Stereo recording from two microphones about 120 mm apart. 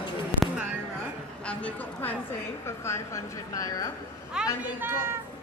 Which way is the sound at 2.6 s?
20° left (ahead or behind).